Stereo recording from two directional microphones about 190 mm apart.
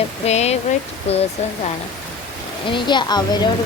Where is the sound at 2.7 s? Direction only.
25° left (ahead or behind).